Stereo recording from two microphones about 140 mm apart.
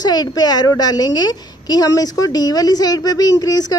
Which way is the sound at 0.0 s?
30° left (ahead or behind).